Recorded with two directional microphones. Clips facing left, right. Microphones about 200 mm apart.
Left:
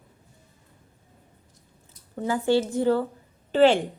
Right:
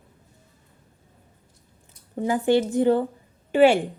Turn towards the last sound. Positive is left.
turn(degrees=-10)  # may be behind; listen again after turning